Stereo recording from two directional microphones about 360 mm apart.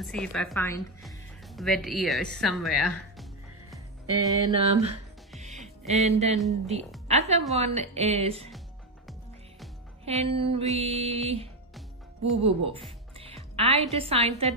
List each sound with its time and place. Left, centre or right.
0.0 s speech: centre
4.1 s a woman's voice: centre
6.3 s a woman's voice: centre
7.1 s music: centre
7.5 s a woman's voice: centre
8.5 s music: centre
10.0 s a woman's voice: centre
12.4 s a woman's voice: centre